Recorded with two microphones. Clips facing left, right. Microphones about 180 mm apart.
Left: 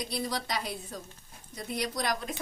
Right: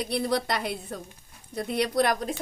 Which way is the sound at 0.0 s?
65° right (ahead or behind).